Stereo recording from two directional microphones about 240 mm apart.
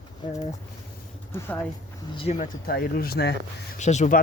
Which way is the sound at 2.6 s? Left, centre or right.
Left.